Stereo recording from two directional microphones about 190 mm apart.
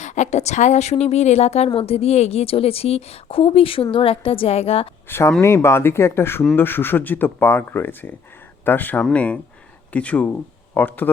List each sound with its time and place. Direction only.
0.0 s a woman's voice: 40° left (ahead or behind)
5.0 s speech: 10° left (ahead or behind)